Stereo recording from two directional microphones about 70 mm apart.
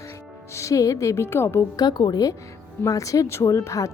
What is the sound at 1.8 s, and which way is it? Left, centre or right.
Speech, left.